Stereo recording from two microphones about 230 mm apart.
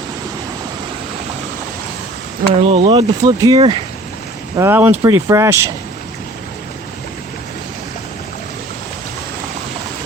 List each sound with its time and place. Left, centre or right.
2.6 s speech: right